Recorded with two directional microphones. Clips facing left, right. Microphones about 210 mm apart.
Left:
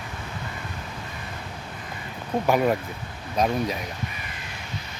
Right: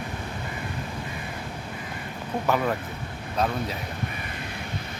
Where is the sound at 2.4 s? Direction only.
15° left (ahead or behind).